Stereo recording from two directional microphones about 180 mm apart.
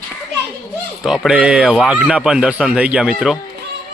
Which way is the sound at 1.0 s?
Centre (ahead or behind).